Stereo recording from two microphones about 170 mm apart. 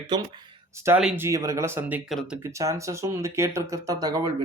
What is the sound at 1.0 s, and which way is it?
Speech, 5° right (ahead or behind).